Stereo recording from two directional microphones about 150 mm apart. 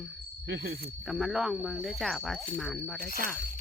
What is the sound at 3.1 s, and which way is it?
Speech, 70° right (ahead or behind).